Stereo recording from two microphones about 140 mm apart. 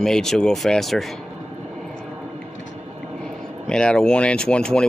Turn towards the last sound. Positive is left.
turn(degrees=5)  # may be behind; listen again after turning